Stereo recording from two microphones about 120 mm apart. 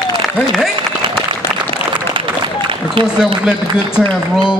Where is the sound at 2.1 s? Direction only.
45° right (ahead or behind).